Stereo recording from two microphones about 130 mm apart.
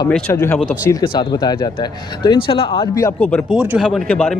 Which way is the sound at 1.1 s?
35° left (ahead or behind).